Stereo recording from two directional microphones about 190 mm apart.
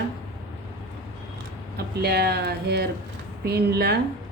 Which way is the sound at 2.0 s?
55° right (ahead or behind).